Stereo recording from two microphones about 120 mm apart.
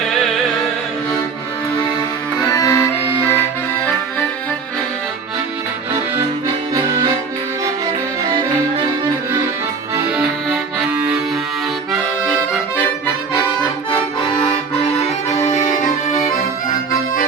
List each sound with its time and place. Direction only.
2.5 s accordion: 30° left (ahead or behind)
6.7 s accordion: 25° right (ahead or behind)
10.2 s accordion: 5° right (ahead or behind)
15.4 s music: 85° left